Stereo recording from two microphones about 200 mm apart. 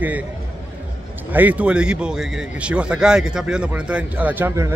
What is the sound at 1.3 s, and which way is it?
A man's voice, 5° right (ahead or behind).